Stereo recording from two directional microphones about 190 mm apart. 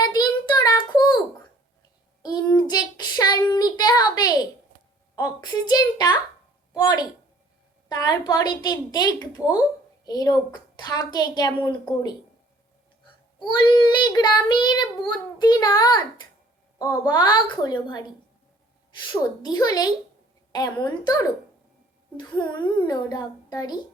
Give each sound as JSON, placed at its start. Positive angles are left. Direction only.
{"t": 0.0, "sound": "a sound", "side_deg": 20}
{"t": 2.2, "sound": "child singing", "side_deg": 20}
{"t": 3.5, "sound": "a sound", "side_deg": 20}
{"t": 5.1, "sound": "child singing", "side_deg": 20}
{"t": 13.4, "sound": "child singing", "side_deg": 25}
{"t": 19.0, "sound": "child singing", "side_deg": 20}